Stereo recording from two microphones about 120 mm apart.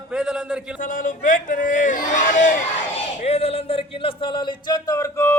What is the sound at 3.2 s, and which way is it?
Speech, 60° left (ahead or behind).